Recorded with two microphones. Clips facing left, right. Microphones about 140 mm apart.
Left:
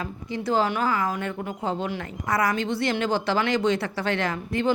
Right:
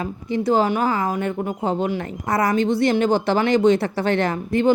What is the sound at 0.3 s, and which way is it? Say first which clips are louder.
Speech: right 6 dB; 50° right (ahead or behind).